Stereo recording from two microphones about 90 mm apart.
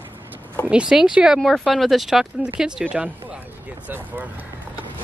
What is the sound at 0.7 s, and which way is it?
Speech, 5° right (ahead or behind).